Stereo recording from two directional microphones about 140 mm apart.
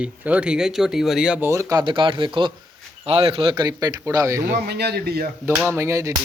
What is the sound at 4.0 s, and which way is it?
Music, 25° right (ahead or behind).